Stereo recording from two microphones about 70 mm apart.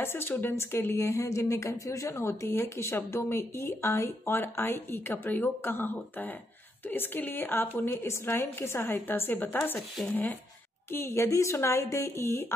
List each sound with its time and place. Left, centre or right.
0.0 s speech: left
6.9 s speech: left
10.9 s speech: left